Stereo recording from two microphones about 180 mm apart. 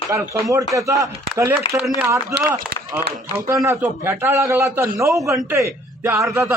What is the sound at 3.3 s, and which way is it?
A man's voice, 15° right (ahead or behind).